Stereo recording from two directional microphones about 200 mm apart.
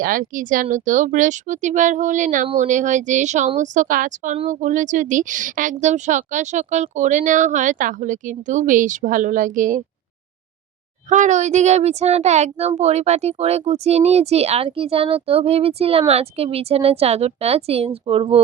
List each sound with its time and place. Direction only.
0.0 s speech: 45° right (ahead or behind)
11.1 s speech: 35° right (ahead or behind)